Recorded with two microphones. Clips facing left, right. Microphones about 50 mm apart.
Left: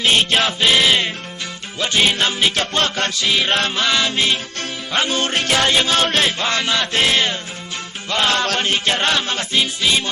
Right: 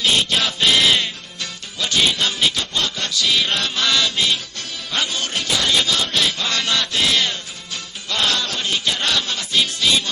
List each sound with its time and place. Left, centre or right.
0.0 s music: left
0.6 s music: centre
1.8 s music: left
2.6 s music: left
5.6 s music: left
6.0 s chant: left
6.2 s music: left
8.4 s music: left
9.6 s music: left